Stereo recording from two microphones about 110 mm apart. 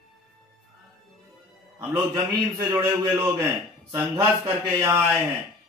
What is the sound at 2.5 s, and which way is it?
A man's voice, 30° right (ahead or behind).